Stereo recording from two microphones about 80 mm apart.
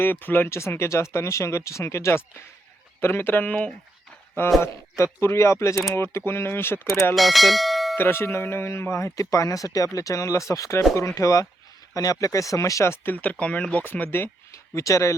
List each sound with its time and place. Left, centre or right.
0.0 s speech: left
4.9 s speech: left
7.2 s speech: centre
7.9 s speech: left
13.4 s speech: centre
14.5 s speech: left